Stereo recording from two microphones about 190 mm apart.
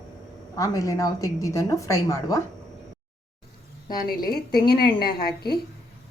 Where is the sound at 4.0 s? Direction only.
50° left (ahead or behind).